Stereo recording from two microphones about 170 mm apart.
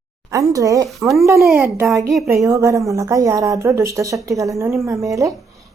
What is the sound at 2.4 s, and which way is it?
Speech, 20° right (ahead or behind).